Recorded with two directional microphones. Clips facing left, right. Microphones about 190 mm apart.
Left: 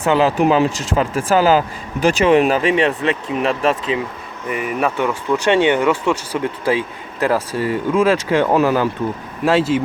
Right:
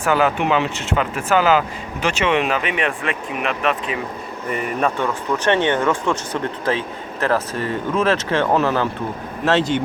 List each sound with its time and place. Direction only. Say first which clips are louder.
0.0 s speech: left 3 dB; 25° left (ahead or behind)
4.4 s speech: left 1 dB; 5° left (ahead or behind)